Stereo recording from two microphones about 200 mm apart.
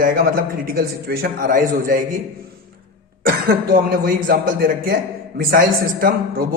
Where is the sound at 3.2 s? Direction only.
50° right (ahead or behind).